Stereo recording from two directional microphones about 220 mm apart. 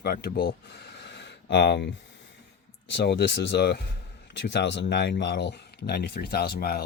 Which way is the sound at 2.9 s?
50° left (ahead or behind).